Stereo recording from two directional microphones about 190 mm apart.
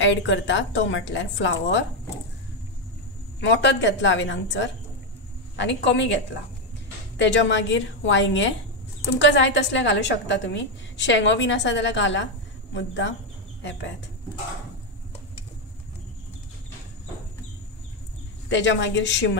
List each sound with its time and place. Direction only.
0.0 s a woman's voice: 75° left (ahead or behind)
3.3 s a woman's voice: 70° left (ahead or behind)
7.2 s a woman's voice: 70° left (ahead or behind)
18.5 s a woman's voice: 70° left (ahead or behind)